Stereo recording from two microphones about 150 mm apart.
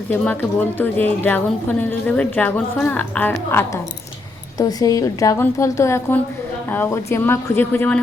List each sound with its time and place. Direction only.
0.1 s a woman's voice: 10° left (ahead or behind)
4.5 s a woman's voice: 25° left (ahead or behind)